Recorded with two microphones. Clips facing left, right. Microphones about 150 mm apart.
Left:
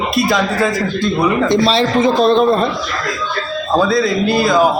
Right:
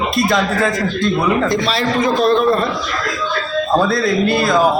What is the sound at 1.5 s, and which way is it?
A man's voice, 30° left (ahead or behind).